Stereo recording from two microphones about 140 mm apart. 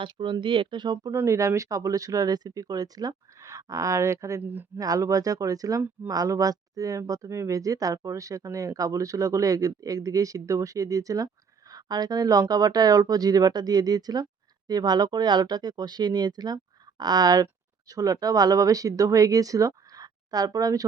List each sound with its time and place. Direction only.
0.0 s speech: 35° right (ahead or behind)
1.1 s speech: 20° right (ahead or behind)